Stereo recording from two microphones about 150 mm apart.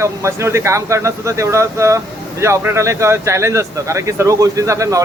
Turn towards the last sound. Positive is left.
turn(degrees=-20)  # may be behind; listen again after turning